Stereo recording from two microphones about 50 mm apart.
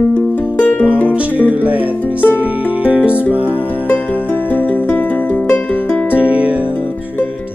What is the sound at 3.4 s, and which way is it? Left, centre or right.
Music, right.